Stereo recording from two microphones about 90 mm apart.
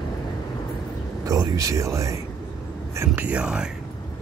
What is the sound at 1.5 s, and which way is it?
Speech, 35° right (ahead or behind).